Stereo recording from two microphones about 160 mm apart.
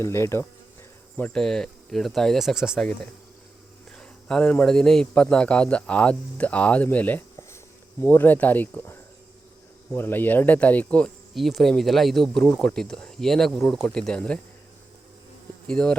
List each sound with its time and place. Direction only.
0.0 s a man's voice: 15° left (ahead or behind)
15.6 s a man's voice: 5° left (ahead or behind)